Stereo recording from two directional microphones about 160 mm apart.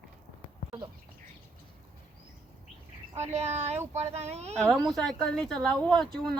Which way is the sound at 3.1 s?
40° right (ahead or behind).